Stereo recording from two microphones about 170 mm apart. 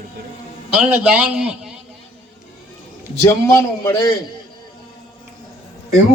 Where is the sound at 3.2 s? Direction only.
15° left (ahead or behind).